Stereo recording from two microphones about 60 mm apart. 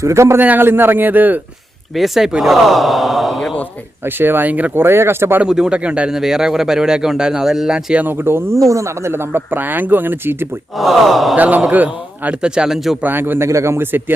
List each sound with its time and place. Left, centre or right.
0.0 s speech: right
0.3 s speech: right
2.0 s speech: centre
4.0 s speech: right
4.7 s speech: right
5.5 s a man's voice: centre
8.1 s speech: right
8.5 s speech: right
10.8 s speech: centre
11.3 s a man's voice: right
12.4 s a man's voice: centre
13.0 s speech: right
13.5 s speech: right